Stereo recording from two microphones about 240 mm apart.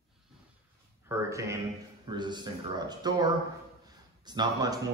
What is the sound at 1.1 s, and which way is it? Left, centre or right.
Speech, centre.